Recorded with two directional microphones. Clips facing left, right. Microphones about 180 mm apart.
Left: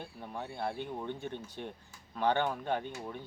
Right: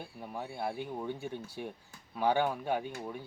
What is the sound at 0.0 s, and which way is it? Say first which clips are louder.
Speech: right 1 dB; 10° right (ahead or behind).